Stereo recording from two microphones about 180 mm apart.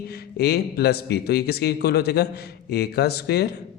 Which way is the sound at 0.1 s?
60° left (ahead or behind).